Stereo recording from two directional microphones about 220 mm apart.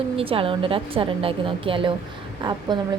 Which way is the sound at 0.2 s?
25° right (ahead or behind).